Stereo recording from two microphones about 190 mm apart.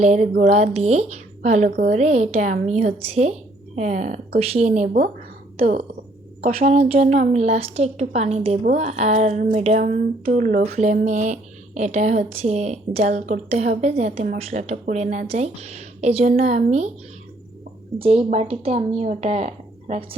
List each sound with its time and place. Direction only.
0.0 s a woman's voice: 40° right (ahead or behind)
18.0 s speech: 30° right (ahead or behind)